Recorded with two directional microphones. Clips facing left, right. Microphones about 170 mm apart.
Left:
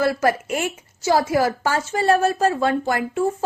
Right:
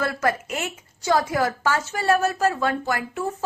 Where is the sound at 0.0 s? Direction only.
25° left (ahead or behind).